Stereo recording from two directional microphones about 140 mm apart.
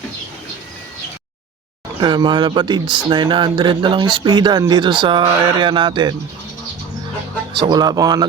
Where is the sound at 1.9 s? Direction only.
30° right (ahead or behind).